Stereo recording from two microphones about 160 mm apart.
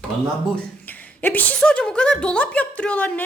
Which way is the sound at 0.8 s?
10° left (ahead or behind).